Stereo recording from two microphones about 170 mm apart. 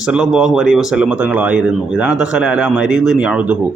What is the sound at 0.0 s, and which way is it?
Speech, 5° right (ahead or behind).